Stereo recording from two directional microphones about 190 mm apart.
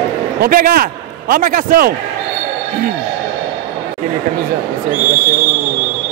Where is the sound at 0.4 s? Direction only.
50° right (ahead or behind).